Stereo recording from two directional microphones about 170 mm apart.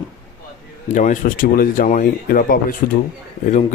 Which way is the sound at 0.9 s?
45° left (ahead or behind).